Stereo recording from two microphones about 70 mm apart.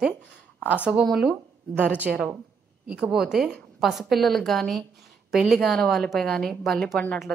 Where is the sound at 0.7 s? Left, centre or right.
Centre.